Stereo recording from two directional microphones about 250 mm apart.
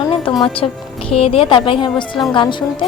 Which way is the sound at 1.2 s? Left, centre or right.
Left.